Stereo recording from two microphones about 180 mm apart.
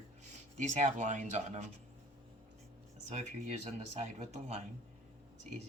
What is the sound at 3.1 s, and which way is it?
Speech, 40° right (ahead or behind).